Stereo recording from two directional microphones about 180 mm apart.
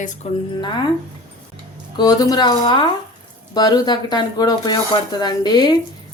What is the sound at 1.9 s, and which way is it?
Speech, 20° left (ahead or behind).